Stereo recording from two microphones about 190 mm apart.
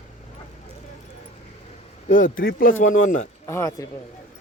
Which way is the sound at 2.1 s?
45° left (ahead or behind).